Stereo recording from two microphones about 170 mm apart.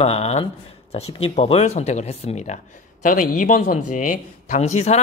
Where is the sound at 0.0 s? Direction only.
40° left (ahead or behind).